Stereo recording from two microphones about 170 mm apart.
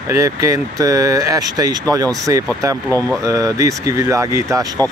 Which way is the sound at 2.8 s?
10° left (ahead or behind).